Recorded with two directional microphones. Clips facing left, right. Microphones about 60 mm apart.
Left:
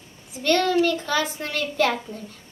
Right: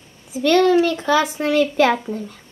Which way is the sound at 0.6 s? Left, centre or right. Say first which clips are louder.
Right 7 dB; right.